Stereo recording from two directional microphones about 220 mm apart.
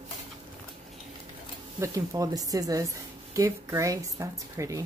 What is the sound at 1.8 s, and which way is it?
A woman's voice, 15° right (ahead or behind).